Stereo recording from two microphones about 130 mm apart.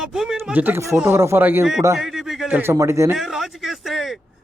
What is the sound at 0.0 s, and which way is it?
Speech, 5° right (ahead or behind).